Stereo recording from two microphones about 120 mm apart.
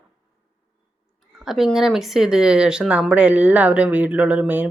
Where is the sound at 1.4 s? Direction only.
5° right (ahead or behind).